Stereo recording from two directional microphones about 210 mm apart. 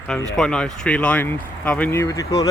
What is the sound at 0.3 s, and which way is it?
Speech, 5° left (ahead or behind).